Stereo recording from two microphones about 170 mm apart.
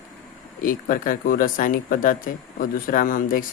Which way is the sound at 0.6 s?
55° left (ahead or behind).